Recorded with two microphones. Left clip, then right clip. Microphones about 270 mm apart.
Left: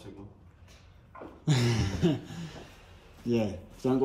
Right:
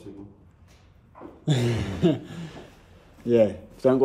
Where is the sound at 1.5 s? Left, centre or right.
Centre.